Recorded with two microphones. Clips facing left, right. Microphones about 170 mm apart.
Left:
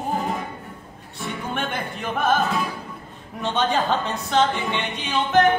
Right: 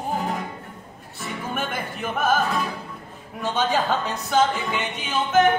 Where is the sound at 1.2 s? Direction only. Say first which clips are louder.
Left 1 dB; centre (ahead or behind).